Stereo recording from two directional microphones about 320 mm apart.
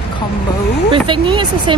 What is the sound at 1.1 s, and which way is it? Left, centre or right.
Speech, centre.